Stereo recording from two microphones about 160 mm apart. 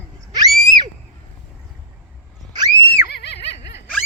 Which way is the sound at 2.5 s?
25° right (ahead or behind).